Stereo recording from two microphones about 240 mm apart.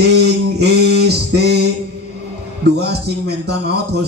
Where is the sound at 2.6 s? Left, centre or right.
Right.